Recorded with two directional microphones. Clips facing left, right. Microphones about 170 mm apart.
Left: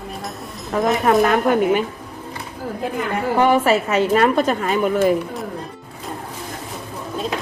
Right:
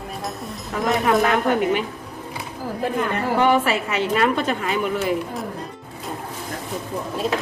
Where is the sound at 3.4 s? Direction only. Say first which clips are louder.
Left 4 dB; 45° left (ahead or behind).